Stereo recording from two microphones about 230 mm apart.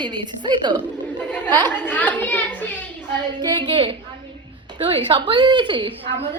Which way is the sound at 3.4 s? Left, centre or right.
Centre.